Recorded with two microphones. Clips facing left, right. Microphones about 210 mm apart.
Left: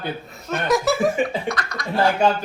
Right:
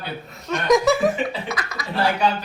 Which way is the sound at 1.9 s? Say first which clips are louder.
Left 3 dB; 45° left (ahead or behind).